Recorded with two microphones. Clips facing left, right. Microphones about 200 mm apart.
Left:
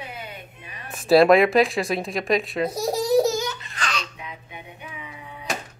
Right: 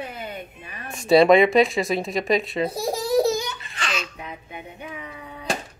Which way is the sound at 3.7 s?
5° right (ahead or behind).